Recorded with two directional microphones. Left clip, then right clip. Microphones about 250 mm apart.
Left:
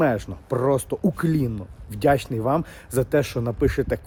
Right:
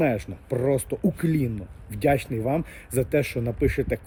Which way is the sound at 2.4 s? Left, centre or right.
Centre.